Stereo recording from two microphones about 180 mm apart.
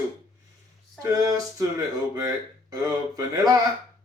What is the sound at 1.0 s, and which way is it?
Speech, 20° right (ahead or behind).